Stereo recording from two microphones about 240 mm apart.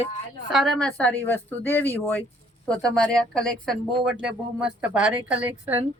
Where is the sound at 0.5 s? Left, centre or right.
Centre.